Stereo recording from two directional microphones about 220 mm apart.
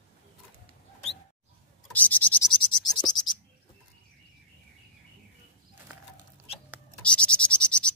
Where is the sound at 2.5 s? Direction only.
20° left (ahead or behind).